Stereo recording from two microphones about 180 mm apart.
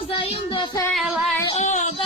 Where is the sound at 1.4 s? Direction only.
40° left (ahead or behind).